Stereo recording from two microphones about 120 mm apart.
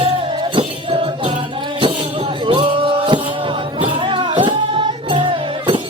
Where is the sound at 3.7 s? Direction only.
45° right (ahead or behind).